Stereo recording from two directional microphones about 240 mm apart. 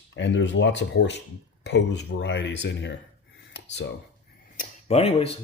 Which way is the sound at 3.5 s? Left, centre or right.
Left.